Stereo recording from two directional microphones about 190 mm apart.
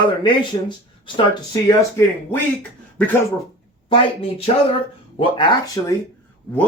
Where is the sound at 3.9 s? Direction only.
30° left (ahead or behind).